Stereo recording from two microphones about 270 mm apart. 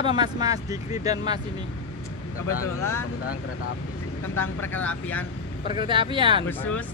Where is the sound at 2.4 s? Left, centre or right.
Left.